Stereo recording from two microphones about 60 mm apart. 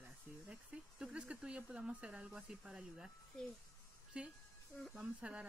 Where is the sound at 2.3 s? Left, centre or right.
Centre.